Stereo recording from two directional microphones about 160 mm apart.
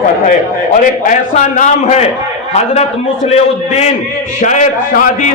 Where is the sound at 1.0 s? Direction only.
50° left (ahead or behind).